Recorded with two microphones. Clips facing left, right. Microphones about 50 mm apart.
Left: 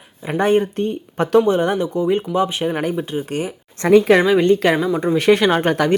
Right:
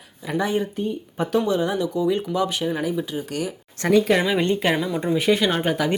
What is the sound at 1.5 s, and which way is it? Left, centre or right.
Speech, left.